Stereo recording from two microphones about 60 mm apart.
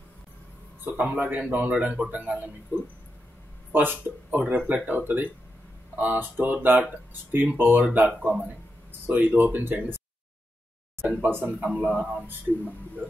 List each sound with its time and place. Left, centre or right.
0.9 s a man's voice: right
11.1 s a man's voice: right